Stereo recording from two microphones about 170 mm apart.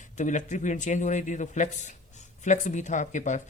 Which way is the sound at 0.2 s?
45° left (ahead or behind).